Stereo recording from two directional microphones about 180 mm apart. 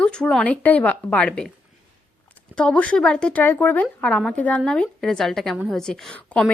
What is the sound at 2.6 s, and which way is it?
A woman's voice, 5° left (ahead or behind).